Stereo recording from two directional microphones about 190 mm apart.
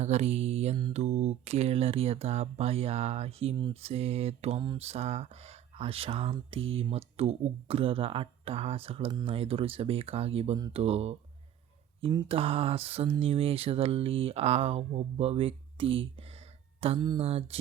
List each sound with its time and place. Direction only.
0.0 s speech: 35° right (ahead or behind)